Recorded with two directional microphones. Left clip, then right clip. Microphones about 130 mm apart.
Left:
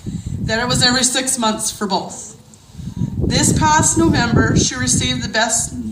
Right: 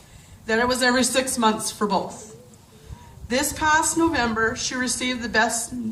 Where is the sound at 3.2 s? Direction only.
30° left (ahead or behind).